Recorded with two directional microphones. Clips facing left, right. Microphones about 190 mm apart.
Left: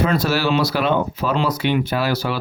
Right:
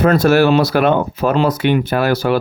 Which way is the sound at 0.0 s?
50° right (ahead or behind).